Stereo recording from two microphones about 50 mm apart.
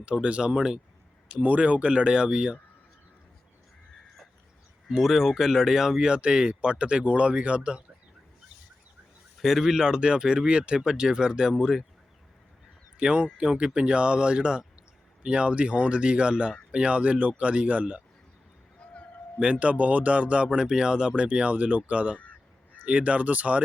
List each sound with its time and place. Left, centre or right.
0.0 s speech: right
1.4 s speech: right
4.9 s speech: centre
6.1 s speech: centre
9.4 s speech: centre
13.0 s speech: centre
19.4 s speech: right